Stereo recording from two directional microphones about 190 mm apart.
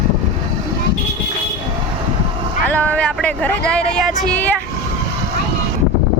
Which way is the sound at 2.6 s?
10° left (ahead or behind).